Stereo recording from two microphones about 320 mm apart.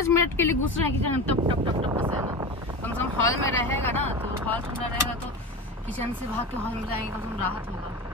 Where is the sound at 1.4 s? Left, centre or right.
Centre.